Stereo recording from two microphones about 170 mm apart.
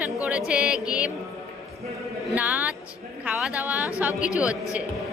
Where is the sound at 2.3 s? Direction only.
10° right (ahead or behind).